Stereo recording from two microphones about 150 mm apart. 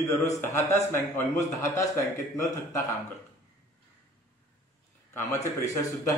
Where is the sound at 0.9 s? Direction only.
15° left (ahead or behind).